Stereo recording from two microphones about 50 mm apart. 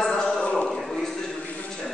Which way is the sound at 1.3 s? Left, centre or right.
Left.